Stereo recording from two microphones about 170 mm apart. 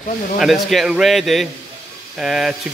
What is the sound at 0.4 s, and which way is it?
Speech, centre (ahead or behind).